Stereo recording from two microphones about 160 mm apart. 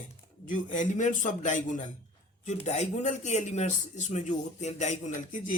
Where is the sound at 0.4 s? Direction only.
55° left (ahead or behind).